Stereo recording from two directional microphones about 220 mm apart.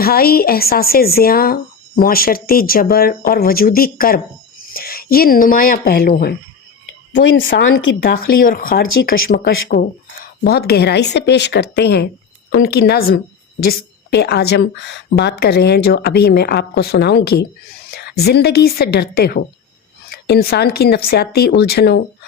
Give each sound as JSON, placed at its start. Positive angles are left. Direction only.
{"t": 0.0, "sound": "speech", "side_deg": 45}
{"t": 7.1, "sound": "a woman's voice", "side_deg": 60}
{"t": 8.0, "sound": "speech", "side_deg": 40}